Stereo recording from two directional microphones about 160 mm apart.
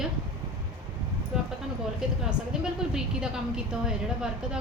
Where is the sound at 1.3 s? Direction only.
5° right (ahead or behind).